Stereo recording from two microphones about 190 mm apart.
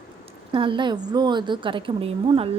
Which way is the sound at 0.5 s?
25° right (ahead or behind).